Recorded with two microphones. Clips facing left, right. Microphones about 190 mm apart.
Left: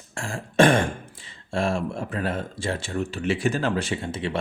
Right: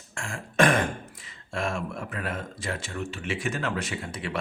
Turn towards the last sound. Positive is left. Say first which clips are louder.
# left 5 dB
turn(degrees=25)  # may be behind; listen again after turning